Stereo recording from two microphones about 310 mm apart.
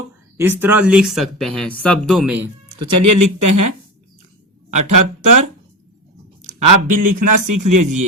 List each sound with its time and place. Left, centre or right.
0.3 s speech: centre
3.0 s speech: right
6.6 s speech: right